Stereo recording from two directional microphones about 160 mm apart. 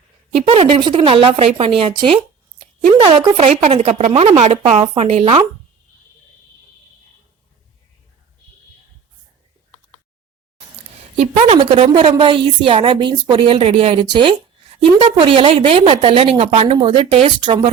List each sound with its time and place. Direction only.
0.4 s a woman's voice: 35° right (ahead or behind)
11.2 s a woman's voice: 40° right (ahead or behind)